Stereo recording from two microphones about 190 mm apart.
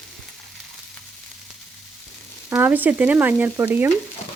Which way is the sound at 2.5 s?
10° right (ahead or behind).